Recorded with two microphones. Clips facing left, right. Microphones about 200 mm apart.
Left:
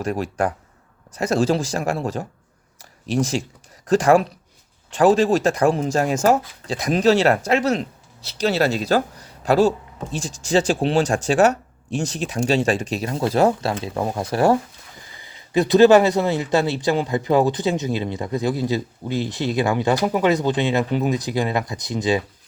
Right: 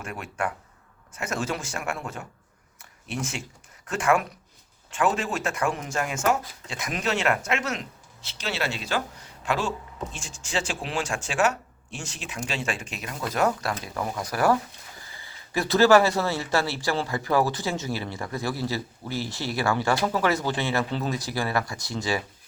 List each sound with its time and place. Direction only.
0.0 s speech: 35° left (ahead or behind)
2.7 s a sound: 35° left (ahead or behind)
3.8 s speech: 35° left (ahead or behind); by 22.2 s 20° left (ahead or behind)